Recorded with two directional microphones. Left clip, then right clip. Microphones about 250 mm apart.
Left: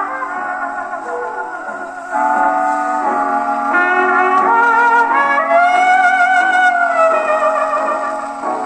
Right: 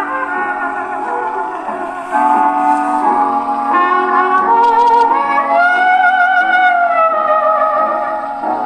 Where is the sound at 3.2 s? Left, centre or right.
Left.